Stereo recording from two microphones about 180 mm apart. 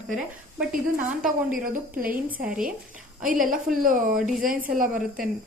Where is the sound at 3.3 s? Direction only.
50° right (ahead or behind).